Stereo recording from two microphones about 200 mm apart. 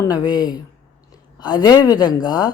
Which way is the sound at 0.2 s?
20° left (ahead or behind).